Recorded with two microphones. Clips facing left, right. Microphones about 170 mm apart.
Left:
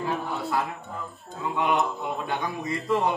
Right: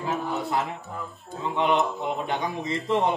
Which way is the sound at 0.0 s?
20° right (ahead or behind).